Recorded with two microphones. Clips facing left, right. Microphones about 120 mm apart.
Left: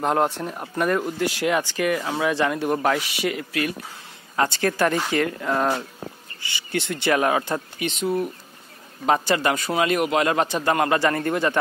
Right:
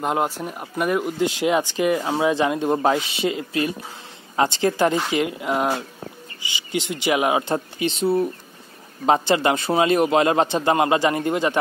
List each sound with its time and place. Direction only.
0.0 s speech: 5° right (ahead or behind)
7.4 s speech: 30° right (ahead or behind)